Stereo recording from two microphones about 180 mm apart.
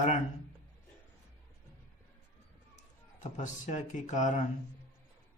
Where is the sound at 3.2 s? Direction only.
40° left (ahead or behind).